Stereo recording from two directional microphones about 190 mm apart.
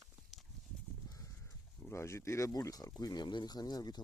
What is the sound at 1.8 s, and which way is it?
Speech, 15° left (ahead or behind).